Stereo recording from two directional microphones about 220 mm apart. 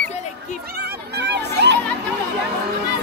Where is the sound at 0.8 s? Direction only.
50° right (ahead or behind).